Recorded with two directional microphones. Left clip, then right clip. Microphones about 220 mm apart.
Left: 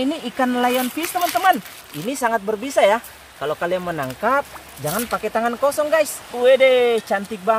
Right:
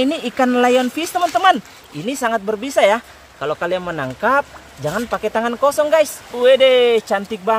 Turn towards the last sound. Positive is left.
turn(degrees=-5)  # may be behind; listen again after turning